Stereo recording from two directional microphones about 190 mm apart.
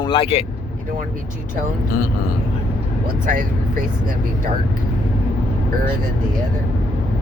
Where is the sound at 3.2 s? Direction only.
45° right (ahead or behind).